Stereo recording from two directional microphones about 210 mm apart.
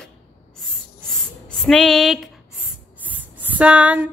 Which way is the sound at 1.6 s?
Centre (ahead or behind).